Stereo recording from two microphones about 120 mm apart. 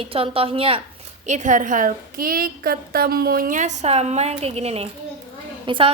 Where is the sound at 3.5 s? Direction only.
85° right.